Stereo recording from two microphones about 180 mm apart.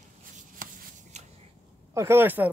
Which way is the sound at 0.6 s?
45° right (ahead or behind).